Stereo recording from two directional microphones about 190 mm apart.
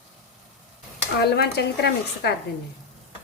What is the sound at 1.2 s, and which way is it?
A woman's voice, 60° left (ahead or behind).